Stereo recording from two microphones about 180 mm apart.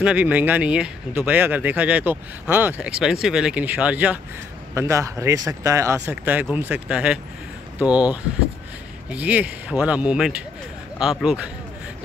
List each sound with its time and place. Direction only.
0.0 s speech: 5° right (ahead or behind)